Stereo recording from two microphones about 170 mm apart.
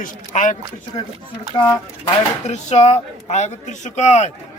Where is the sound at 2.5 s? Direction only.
40° left (ahead or behind).